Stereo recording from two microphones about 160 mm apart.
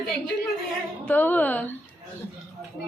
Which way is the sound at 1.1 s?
10° left (ahead or behind).